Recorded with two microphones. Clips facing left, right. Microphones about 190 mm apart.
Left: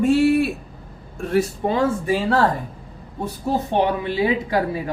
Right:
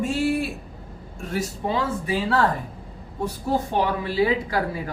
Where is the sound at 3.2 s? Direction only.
20° left (ahead or behind).